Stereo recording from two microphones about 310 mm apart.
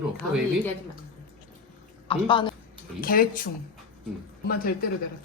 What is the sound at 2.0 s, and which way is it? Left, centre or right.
Speech, centre.